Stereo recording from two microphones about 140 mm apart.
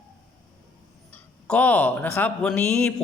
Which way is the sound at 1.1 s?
10° left (ahead or behind).